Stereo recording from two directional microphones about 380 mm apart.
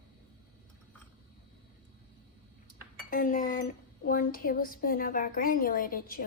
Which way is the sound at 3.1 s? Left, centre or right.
Left.